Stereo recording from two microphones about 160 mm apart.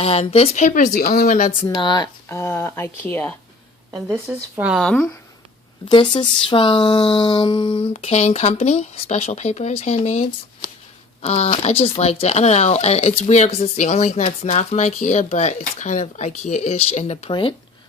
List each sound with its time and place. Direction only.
0.0 s speech: 40° left (ahead or behind)
0.9 s speech: 60° left (ahead or behind)
1.7 s speech: 25° left (ahead or behind); by 3.3 s 10° left (ahead or behind)
4.3 s speech: 10° right (ahead or behind)
4.9 s speech: 5° left (ahead or behind)
5.9 s speech: 30° left (ahead or behind)